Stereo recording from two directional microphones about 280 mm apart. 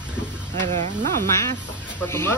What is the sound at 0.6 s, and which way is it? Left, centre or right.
Speech, right.